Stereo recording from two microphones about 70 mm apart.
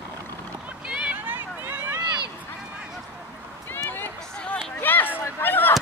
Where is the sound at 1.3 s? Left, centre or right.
Right.